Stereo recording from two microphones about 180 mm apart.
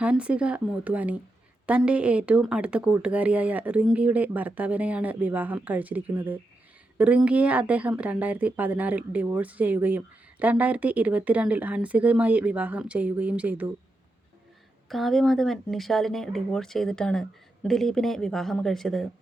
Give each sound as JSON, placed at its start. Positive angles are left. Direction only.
{"t": 0.0, "sound": "speech", "side_deg": -5}
{"t": 14.8, "sound": "speech", "side_deg": 0}